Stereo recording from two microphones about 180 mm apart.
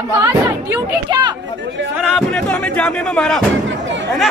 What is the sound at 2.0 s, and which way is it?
Speech, 5° left (ahead or behind).